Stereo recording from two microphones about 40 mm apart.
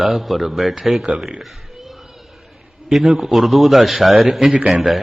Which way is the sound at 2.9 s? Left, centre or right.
Centre.